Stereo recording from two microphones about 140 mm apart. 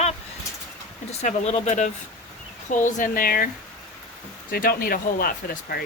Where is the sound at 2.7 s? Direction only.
65° left (ahead or behind); by 3.5 s 90° left.